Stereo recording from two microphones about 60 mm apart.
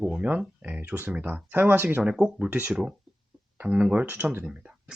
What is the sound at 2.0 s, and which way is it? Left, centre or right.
Speech, centre.